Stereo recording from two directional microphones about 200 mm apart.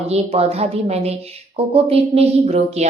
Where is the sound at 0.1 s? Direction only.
30° right (ahead or behind).